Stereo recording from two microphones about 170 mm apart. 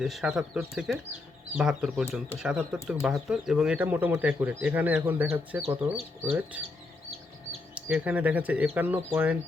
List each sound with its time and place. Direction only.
0.0 s speech: centre (ahead or behind)
5.6 s speech: 35° right (ahead or behind)
6.5 s speech: 10° right (ahead or behind)
7.8 s speech: 10° right (ahead or behind)